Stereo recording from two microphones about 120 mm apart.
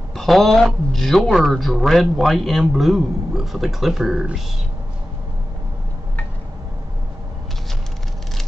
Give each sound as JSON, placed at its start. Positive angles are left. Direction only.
{"t": 0.1, "sound": "a man's voice", "side_deg": 0}